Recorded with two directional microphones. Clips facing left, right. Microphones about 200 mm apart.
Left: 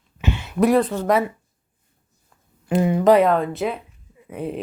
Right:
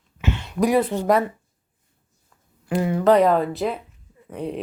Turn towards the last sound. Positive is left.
turn(degrees=5)  # may be behind; listen again after turning